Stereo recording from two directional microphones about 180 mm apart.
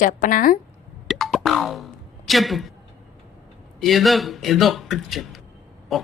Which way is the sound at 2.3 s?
Centre (ahead or behind).